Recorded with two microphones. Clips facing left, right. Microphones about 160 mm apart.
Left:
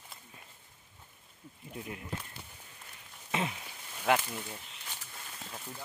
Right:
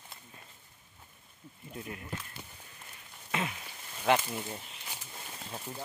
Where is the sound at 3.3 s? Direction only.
20° left (ahead or behind).